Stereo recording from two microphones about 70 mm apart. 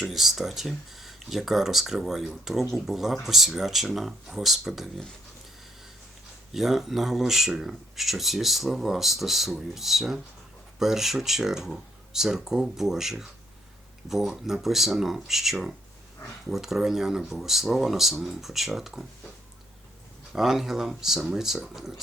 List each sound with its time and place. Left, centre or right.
0.0 s speech: centre
6.5 s speech: centre
20.3 s speech: centre